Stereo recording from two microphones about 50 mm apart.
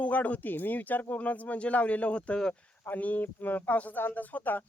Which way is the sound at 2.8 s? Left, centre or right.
Left.